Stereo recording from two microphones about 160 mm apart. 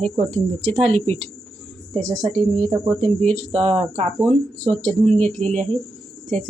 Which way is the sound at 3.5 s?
35° right (ahead or behind).